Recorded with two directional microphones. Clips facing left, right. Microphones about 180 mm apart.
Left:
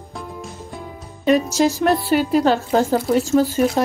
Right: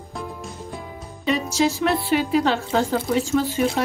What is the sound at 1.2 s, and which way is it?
Speech, 45° left (ahead or behind).